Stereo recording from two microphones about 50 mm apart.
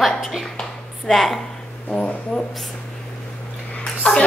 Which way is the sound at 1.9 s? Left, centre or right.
Left.